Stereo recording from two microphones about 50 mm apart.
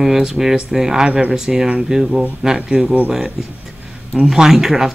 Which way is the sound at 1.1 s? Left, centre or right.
Right.